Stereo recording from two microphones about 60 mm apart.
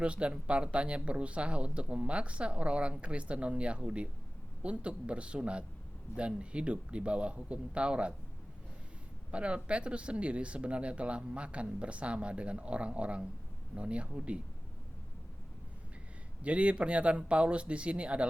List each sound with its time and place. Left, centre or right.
0.0 s speech: centre
9.3 s speech: centre
16.4 s speech: right